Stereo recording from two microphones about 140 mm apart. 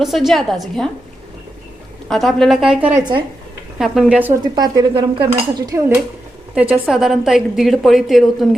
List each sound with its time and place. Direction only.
0.0 s a woman's voice: centre (ahead or behind)
2.0 s a woman's voice: centre (ahead or behind)
4.5 s cutlery: 30° right (ahead or behind)
6.5 s a woman's voice: 10° right (ahead or behind)